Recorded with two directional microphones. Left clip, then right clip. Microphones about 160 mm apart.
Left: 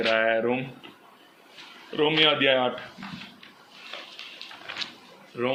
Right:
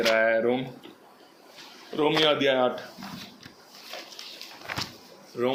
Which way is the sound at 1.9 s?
40° left (ahead or behind).